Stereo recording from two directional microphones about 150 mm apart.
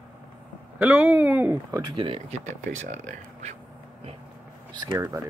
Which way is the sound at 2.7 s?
55° right (ahead or behind).